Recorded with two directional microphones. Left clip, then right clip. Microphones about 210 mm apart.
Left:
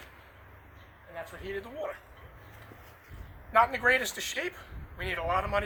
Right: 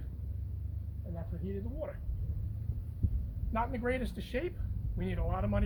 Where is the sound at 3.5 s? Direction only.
5° right (ahead or behind).